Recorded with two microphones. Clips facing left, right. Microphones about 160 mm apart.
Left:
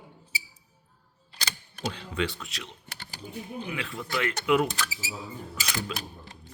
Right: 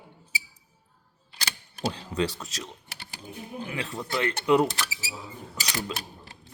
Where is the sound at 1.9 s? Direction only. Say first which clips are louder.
Right 1 dB; 40° right (ahead or behind).